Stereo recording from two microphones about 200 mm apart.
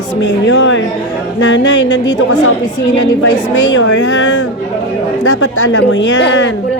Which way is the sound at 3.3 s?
65° left (ahead or behind).